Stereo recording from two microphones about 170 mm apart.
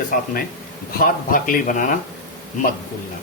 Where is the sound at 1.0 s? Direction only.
55° left (ahead or behind).